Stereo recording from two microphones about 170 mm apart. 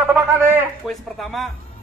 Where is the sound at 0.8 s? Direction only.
Centre (ahead or behind).